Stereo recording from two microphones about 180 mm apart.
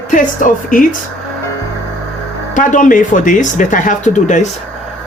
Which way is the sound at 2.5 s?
45° left (ahead or behind).